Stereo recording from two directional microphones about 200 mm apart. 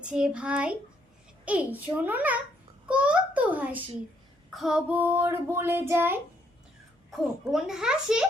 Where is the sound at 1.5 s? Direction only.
5° right (ahead or behind).